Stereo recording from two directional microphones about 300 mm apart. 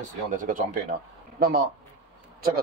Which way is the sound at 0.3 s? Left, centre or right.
Right.